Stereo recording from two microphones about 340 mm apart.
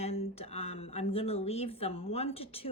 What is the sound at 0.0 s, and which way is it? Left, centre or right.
Speech, centre.